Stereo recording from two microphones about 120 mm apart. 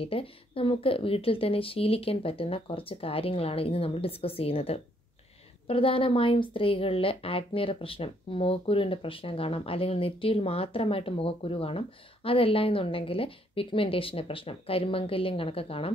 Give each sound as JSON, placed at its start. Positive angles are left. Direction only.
{"t": 0.0, "sound": "a woman's voice", "side_deg": 50}